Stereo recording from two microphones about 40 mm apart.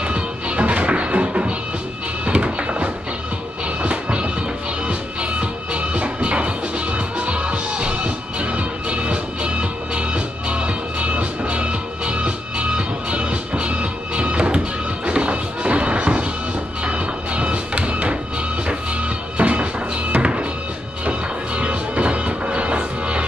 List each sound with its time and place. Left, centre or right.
0.0 s music: right
19.3 s music: right